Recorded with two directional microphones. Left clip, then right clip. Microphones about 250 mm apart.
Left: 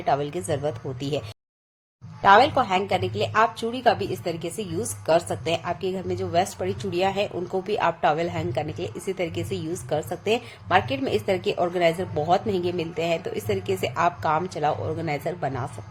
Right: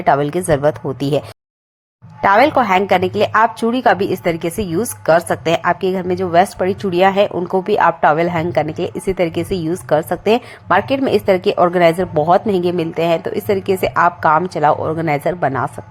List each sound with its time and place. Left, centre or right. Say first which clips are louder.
0.0 s a woman's voice: right 10 dB; right
2.2 s a woman's voice: right 5 dB; right